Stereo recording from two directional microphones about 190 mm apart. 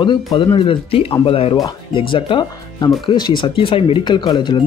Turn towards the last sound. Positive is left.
turn(degrees=25)  # may be behind; listen again after turning